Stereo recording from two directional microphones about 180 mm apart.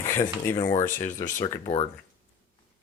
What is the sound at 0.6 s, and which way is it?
Speech, 15° left (ahead or behind).